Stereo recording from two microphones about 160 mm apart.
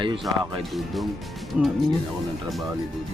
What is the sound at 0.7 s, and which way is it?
Speech, centre (ahead or behind).